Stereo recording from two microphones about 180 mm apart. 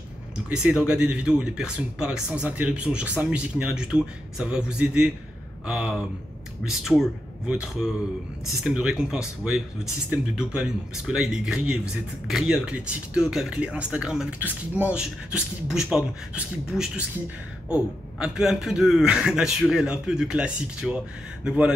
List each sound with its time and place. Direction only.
0.5 s a man's voice: 5° right (ahead or behind)